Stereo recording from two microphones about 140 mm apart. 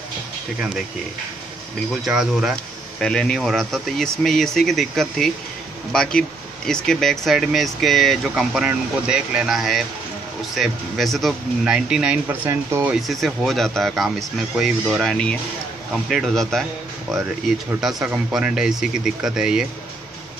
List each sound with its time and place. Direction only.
1.9 s speech: 5° right (ahead or behind)
12.4 s speech: 20° right (ahead or behind)
12.9 s speech: centre (ahead or behind)
17.7 s speech: centre (ahead or behind)